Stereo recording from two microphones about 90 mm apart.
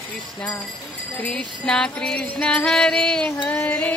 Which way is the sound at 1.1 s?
15° left (ahead or behind).